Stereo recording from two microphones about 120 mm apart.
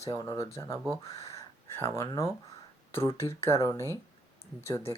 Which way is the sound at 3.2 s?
20° left (ahead or behind).